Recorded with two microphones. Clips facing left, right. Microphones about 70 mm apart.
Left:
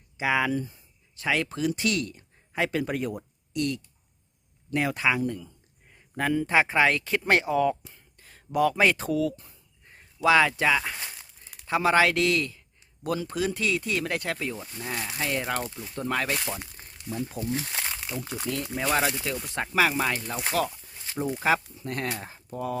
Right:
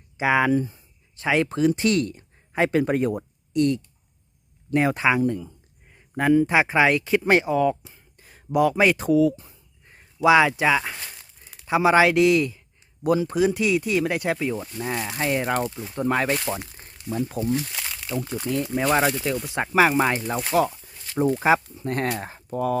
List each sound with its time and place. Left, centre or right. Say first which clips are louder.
0.2 s speech: right 5 dB; right
6.1 s speech: right 5 dB; centre
8.2 s a sound: right 3 dB; centre
8.5 s speech: right 3 dB; centre
14.8 s speech: right 2 dB; right
17.1 s speech: right 6 dB; right
17.5 s speech: right 4 dB; left; by 18.4 s centre
18.6 s speech: right 5 dB; centre
19.5 s speech: right 5 dB; right
21.8 s speech: right 6 dB; right
22.2 s speech: right 7 dB; right